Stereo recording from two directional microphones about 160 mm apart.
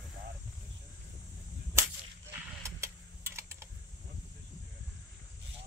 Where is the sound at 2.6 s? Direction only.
15° right (ahead or behind).